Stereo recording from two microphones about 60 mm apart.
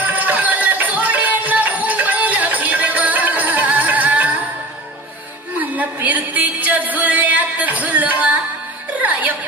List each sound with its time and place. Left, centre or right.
0.0 s music: right
5.6 s a sound: right
9.0 s music: right